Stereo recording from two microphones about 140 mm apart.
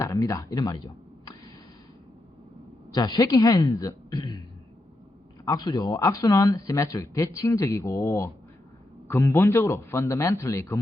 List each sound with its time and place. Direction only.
0.0 s speech: 25° left (ahead or behind)
2.9 s speech: 30° left (ahead or behind)
5.5 s speech: 30° left (ahead or behind)